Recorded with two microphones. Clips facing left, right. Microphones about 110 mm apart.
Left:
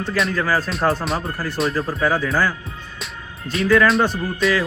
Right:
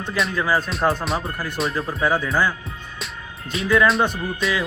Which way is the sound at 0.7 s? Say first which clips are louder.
Left 1 dB; centre (ahead or behind).